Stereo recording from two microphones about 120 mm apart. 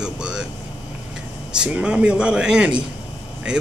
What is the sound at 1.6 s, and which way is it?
A man's voice, 10° right (ahead or behind).